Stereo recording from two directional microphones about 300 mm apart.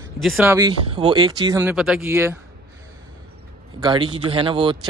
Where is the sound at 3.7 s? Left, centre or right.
Centre.